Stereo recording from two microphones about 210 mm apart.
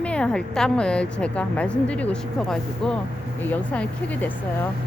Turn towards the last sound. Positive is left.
turn(degrees=5)  # may be behind; listen again after turning